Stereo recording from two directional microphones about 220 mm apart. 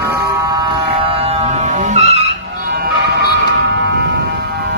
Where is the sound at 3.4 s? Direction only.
55° right (ahead or behind).